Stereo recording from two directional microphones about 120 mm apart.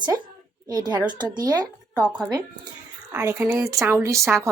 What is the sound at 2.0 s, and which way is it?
Speech, 5° right (ahead or behind).